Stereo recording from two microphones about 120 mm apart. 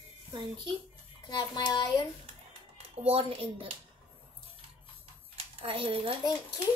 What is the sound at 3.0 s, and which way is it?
Speech, 50° right (ahead or behind).